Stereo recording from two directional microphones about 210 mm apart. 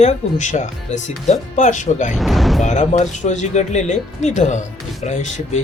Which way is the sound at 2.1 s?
Centre (ahead or behind).